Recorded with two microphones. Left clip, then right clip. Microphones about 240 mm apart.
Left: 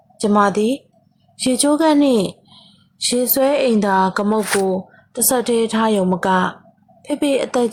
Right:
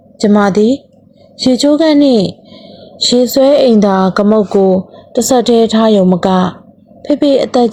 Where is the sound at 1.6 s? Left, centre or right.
Centre.